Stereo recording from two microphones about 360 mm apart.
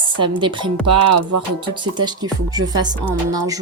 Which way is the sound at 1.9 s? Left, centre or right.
Centre.